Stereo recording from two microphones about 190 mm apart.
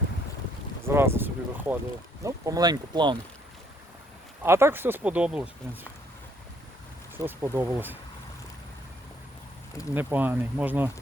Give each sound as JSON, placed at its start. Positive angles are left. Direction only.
{"t": 0.9, "sound": "speech", "side_deg": -10}
{"t": 4.4, "sound": "speech", "side_deg": -15}
{"t": 7.3, "sound": "speech", "side_deg": -10}
{"t": 9.9, "sound": "speech", "side_deg": -10}